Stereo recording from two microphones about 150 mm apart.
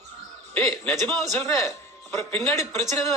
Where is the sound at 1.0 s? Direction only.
15° left (ahead or behind).